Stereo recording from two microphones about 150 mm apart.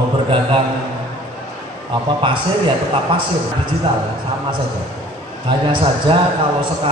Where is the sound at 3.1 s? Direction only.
35° right (ahead or behind).